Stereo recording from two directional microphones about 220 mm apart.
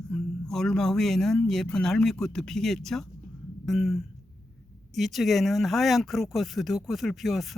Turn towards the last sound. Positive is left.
turn(degrees=0)  # may be behind; listen again after turning